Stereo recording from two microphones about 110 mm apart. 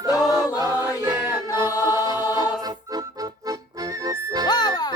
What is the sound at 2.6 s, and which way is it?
Music, 35° right (ahead or behind).